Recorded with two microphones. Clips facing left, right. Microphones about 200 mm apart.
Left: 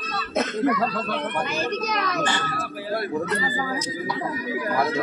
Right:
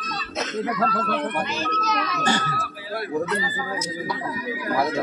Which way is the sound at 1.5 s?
55° left (ahead or behind).